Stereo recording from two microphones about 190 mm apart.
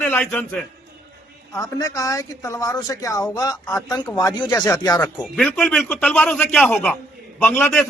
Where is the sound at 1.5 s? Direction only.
15° left (ahead or behind).